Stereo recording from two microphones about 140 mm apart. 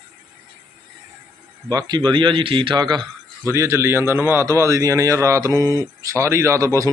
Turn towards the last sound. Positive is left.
turn(degrees=-20)  # may be behind; listen again after turning